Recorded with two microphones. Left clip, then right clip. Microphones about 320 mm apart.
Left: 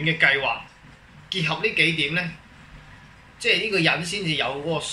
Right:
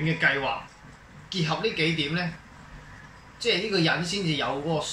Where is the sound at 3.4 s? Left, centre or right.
Centre.